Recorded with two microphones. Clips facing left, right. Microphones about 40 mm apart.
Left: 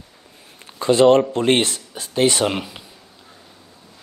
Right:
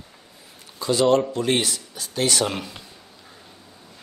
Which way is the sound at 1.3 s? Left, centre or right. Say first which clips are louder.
Left 5 dB; left.